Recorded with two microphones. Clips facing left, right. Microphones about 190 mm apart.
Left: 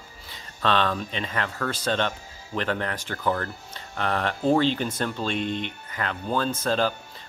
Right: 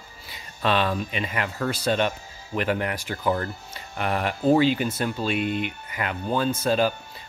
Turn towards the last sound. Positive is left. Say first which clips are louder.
# right 2 dB
turn(degrees=-10)  # may be behind; listen again after turning